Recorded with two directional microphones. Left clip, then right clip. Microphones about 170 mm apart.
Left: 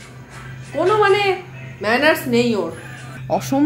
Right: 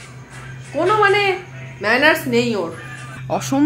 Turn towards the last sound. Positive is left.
turn(degrees=-5)  # may be behind; listen again after turning